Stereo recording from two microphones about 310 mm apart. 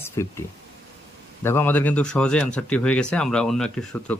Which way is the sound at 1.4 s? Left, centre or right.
Centre.